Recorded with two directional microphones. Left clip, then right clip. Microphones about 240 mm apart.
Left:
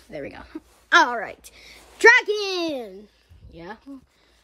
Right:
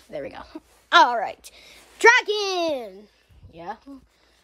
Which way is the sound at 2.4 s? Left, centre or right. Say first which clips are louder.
Right 2 dB; centre.